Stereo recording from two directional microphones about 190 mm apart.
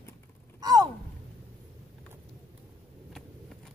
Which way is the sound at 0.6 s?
20° right (ahead or behind).